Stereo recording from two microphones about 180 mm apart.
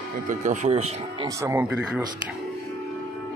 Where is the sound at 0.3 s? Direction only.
45° right (ahead or behind).